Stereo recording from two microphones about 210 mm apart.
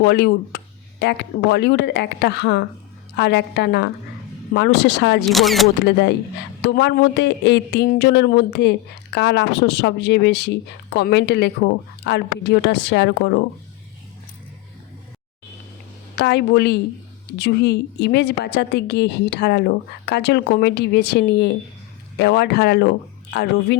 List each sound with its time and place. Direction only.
0.0 s a woman's voice: 50° left (ahead or behind)
5.3 s speech: centre (ahead or behind)
5.8 s a woman's voice: 55° left (ahead or behind)
16.1 s a woman's voice: 50° left (ahead or behind)